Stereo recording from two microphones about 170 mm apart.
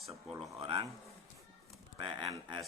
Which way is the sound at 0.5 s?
30° right (ahead or behind).